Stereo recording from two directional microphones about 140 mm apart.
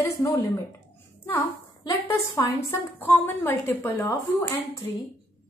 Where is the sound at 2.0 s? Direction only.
15° left (ahead or behind).